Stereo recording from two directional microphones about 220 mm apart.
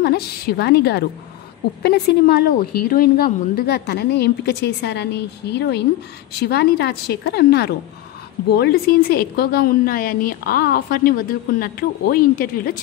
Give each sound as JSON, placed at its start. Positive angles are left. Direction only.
{"t": 0.0, "sound": "a woman's voice", "side_deg": 45}